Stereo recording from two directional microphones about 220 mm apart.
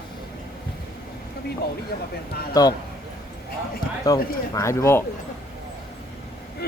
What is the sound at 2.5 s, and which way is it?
Speech, 15° left (ahead or behind).